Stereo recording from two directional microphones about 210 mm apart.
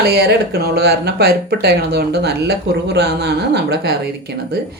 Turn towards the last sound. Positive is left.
turn(degrees=-50)  # may be behind; listen again after turning